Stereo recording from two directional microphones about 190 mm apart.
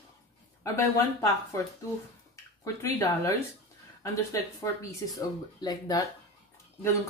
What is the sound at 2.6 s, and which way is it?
Speech, 15° left (ahead or behind).